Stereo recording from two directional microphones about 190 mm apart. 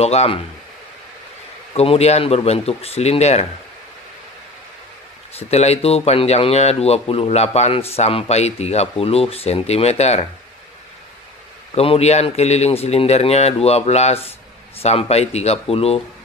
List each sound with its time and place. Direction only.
0.0 s speech: 35° left (ahead or behind)
1.7 s speech: 30° left (ahead or behind)
5.4 s speech: 35° left (ahead or behind)
11.7 s speech: 30° left (ahead or behind)